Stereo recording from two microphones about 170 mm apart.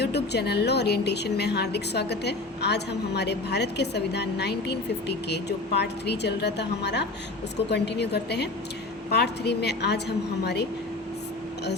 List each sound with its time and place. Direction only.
0.0 s a woman's voice: 75° left (ahead or behind)